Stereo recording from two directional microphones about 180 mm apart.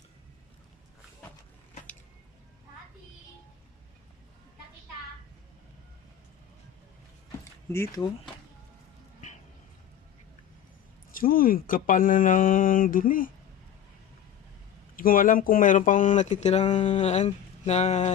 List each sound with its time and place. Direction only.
7.7 s speech: 15° left (ahead or behind)
11.1 s speech: 50° left (ahead or behind)
14.9 s speech: 50° left (ahead or behind)